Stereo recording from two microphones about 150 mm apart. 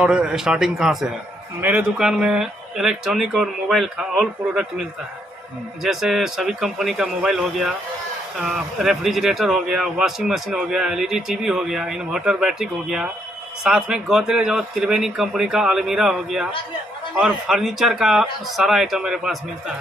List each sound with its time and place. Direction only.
0.0 s speech: 5° right (ahead or behind)
5.9 s speech: centre (ahead or behind)